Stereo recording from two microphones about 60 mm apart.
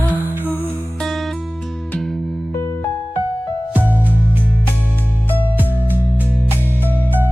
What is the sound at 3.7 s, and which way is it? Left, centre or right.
Music, right.